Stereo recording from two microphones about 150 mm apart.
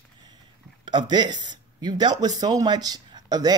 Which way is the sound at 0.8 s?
30° right (ahead or behind).